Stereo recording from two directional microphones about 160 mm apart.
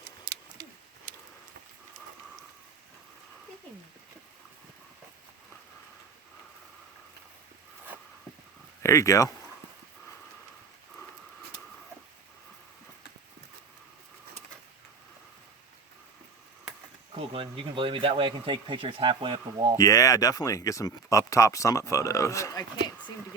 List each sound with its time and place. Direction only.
0.3 s a sound: 75° right (ahead or behind)
8.8 s speech: 20° left (ahead or behind)
17.2 s speech: 35° right (ahead or behind)
19.7 s speech: 20° left (ahead or behind)